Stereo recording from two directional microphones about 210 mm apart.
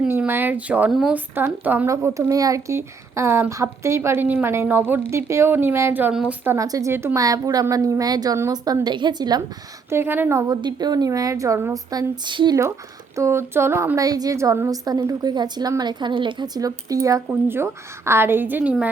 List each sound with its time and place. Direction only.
0.0 s speech: 10° right (ahead or behind)